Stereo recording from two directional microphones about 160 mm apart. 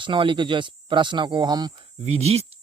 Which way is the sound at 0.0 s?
30° right (ahead or behind).